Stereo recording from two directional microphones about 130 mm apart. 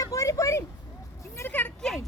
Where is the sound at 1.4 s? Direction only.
15° left (ahead or behind).